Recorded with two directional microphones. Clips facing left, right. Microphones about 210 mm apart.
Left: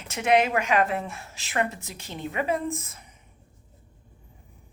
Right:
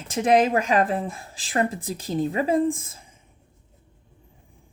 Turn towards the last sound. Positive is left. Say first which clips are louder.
# right 9 dB
turn(degrees=-30)  # may be behind; listen again after turning